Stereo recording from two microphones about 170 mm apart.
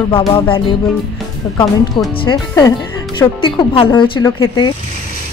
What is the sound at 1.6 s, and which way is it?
Speech, 25° left (ahead or behind).